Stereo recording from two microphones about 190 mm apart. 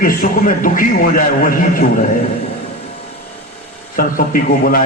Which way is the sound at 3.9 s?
45° left (ahead or behind).